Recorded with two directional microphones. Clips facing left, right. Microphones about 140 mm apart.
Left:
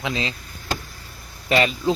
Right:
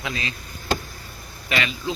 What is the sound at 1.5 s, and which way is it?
Speech, 35° left (ahead or behind).